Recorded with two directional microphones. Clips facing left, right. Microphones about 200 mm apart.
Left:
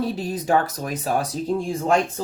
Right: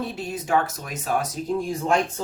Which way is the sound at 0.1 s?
35° left (ahead or behind).